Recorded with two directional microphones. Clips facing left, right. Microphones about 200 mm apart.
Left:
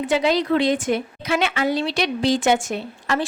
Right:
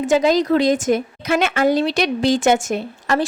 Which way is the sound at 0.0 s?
45° right (ahead or behind).